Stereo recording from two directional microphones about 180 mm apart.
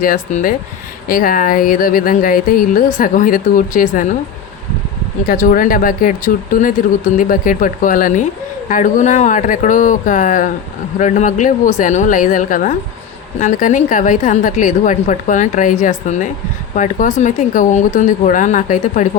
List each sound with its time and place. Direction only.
0.0 s speech: 50° left (ahead or behind)
5.3 s speech: 50° left (ahead or behind)